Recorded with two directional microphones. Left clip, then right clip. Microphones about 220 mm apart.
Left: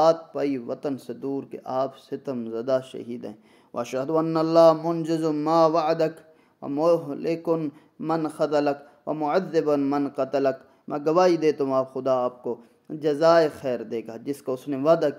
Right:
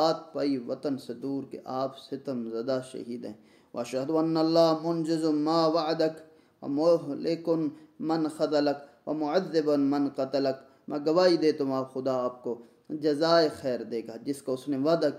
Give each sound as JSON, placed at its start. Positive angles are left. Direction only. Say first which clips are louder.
{"t": 0.0, "sound": "a man's voice", "louder": "left 6 dB", "side_deg": 30}